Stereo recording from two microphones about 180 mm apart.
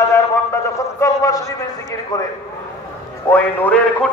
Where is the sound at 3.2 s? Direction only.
10° left (ahead or behind).